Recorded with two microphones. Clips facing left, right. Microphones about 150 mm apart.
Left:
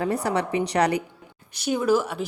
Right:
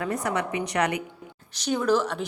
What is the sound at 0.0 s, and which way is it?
A woman's voice, 30° left (ahead or behind).